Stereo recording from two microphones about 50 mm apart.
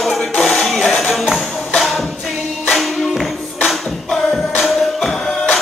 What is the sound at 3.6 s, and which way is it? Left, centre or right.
Singing, centre.